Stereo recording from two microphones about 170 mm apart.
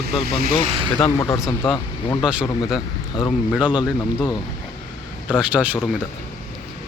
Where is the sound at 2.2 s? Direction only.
5° right (ahead or behind).